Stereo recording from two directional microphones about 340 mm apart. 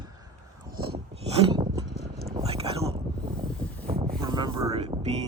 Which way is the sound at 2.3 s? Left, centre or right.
Centre.